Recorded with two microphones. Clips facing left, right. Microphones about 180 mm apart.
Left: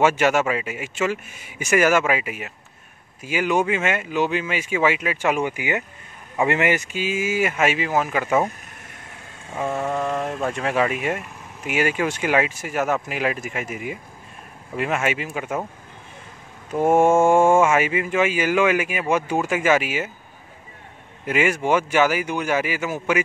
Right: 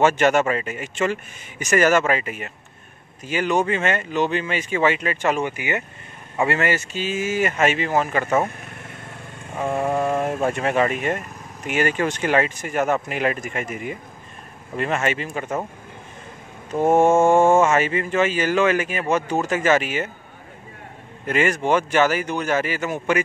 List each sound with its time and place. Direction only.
0.0 s speech: 5° left (ahead or behind)
9.7 s speech: 10° right (ahead or behind); by 15.6 s 5° left (ahead or behind)
16.8 s speech: 10° left (ahead or behind)
21.3 s speech: 10° left (ahead or behind)